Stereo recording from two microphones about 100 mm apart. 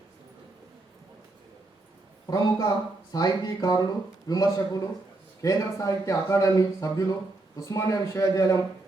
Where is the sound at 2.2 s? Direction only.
40° left (ahead or behind).